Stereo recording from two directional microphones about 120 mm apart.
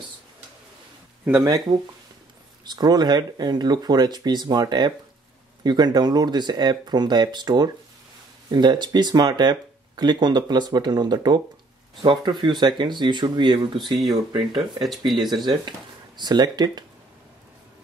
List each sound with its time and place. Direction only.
1.4 s speech: 35° right (ahead or behind)
16.2 s speech: 35° right (ahead or behind)